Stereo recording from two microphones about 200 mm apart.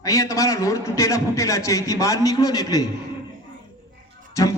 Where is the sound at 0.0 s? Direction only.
15° left (ahead or behind).